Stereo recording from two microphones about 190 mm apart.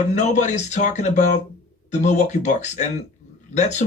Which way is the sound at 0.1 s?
40° left (ahead or behind).